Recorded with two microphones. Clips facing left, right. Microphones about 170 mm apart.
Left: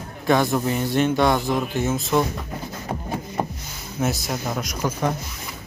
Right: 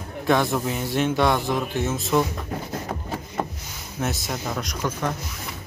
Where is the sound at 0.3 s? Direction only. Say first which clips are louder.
Left 2 dB; centre (ahead or behind).